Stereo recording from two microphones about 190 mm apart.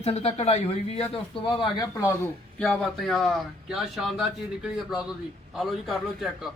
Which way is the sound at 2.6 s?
Centre (ahead or behind).